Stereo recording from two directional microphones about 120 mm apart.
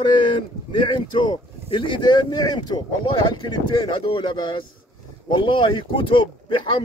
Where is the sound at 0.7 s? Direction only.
40° left (ahead or behind).